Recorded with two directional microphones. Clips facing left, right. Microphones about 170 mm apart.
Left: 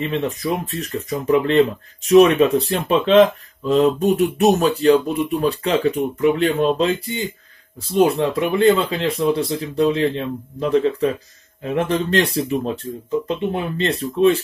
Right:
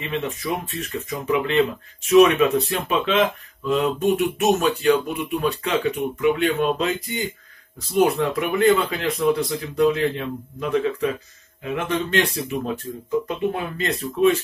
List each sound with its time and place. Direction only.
0.0 s speech: 35° left (ahead or behind)